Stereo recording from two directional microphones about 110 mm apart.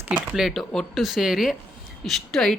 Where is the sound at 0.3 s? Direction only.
Centre (ahead or behind).